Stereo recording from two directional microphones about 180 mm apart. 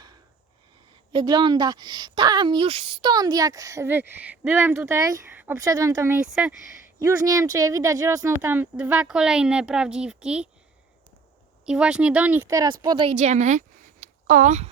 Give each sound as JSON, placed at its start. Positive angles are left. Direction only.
{"t": 1.1, "sound": "a woman's voice", "side_deg": -25}
{"t": 6.1, "sound": "speech", "side_deg": -5}
{"t": 7.0, "sound": "speech", "side_deg": -20}
{"t": 11.6, "sound": "speech", "side_deg": -5}
{"t": 12.5, "sound": "a woman's voice", "side_deg": -20}
{"t": 13.1, "sound": "a woman's voice", "side_deg": -40}